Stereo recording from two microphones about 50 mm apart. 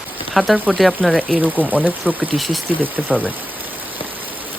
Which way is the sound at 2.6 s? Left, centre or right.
Right.